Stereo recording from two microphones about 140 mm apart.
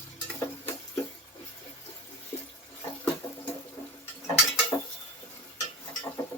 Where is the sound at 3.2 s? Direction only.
30° left (ahead or behind).